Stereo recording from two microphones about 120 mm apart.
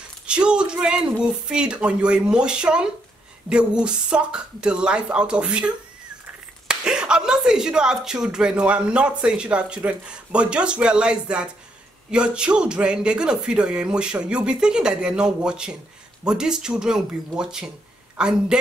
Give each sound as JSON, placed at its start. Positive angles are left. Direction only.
{"t": 0.3, "sound": "speech", "side_deg": -10}
{"t": 6.7, "sound": "speech", "side_deg": -5}